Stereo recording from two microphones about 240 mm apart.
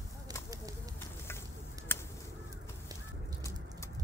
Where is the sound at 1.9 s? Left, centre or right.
Centre.